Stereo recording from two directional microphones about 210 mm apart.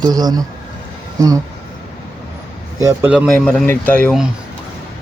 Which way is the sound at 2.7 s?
10° right (ahead or behind).